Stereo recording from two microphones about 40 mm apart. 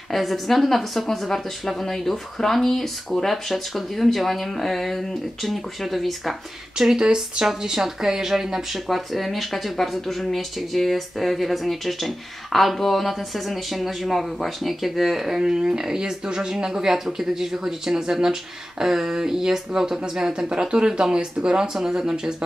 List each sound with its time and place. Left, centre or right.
0.1 s a woman's voice: centre
7.0 s speech: right
8.8 s a woman's voice: centre; by 21.6 s right
21.7 s speech: centre